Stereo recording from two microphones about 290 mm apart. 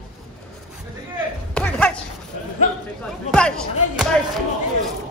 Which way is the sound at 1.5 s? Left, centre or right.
Centre.